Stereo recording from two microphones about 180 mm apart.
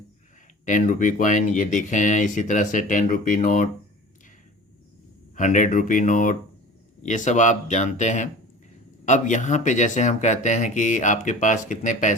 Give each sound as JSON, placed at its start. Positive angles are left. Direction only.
{"t": 0.6, "sound": "speech", "side_deg": 45}
{"t": 5.4, "sound": "speech", "side_deg": 45}